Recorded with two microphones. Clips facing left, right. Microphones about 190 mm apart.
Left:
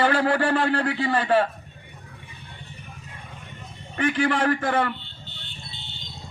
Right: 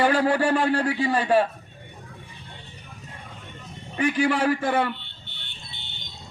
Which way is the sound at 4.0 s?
10° right (ahead or behind).